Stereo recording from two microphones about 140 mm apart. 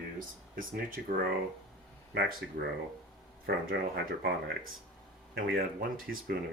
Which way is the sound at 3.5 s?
90° right.